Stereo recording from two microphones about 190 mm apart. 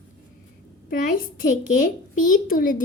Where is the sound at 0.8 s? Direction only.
50° left (ahead or behind).